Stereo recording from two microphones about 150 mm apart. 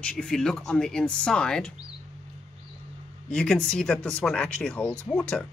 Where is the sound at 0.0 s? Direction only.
5° left (ahead or behind).